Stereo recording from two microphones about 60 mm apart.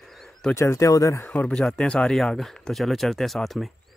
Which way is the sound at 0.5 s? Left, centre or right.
Left.